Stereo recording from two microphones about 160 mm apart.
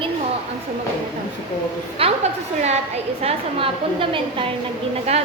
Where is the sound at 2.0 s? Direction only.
35° right (ahead or behind).